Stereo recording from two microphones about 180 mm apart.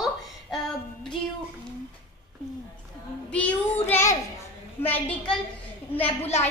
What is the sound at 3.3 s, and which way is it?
A child's voice, 5° left (ahead or behind).